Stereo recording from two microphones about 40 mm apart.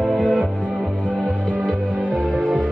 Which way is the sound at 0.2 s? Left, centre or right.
Centre.